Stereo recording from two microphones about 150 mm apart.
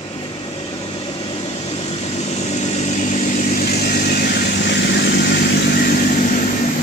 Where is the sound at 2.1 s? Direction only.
45° left (ahead or behind); by 6.4 s 70° left (ahead or behind).